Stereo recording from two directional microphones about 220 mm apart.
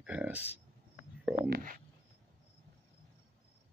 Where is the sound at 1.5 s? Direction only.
40° right (ahead or behind).